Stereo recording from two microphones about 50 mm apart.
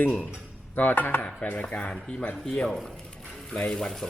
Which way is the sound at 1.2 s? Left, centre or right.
Left.